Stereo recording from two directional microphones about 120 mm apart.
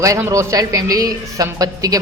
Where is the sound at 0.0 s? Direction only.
25° right (ahead or behind).